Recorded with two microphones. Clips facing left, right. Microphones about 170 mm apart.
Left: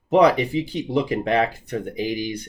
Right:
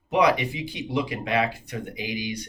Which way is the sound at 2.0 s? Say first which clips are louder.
Left 5 dB; 15° right (ahead or behind).